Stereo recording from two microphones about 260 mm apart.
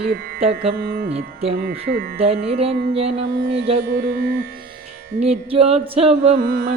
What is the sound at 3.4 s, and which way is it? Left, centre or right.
Carnatic music, right.